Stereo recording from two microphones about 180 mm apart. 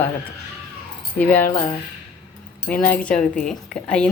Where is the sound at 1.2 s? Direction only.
10° left (ahead or behind).